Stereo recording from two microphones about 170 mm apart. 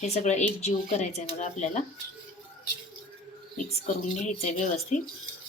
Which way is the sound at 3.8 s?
40° left (ahead or behind).